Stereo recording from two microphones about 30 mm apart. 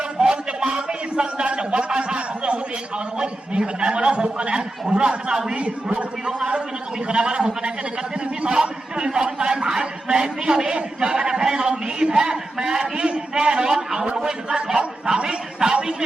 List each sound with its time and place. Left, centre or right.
0.2 s a sound: right
3.2 s a man's voice: right
5.5 s a man's voice: right
6.2 s a man's voice: right